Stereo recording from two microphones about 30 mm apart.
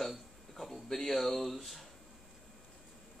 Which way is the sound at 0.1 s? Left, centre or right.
Centre.